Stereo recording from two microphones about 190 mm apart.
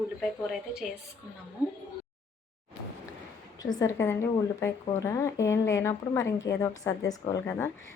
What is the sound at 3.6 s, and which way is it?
Speech, 20° left (ahead or behind).